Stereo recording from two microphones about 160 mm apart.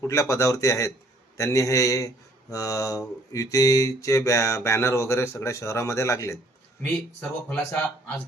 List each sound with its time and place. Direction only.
0.0 s speech: 20° left (ahead or behind)
7.5 s speech: 10° left (ahead or behind)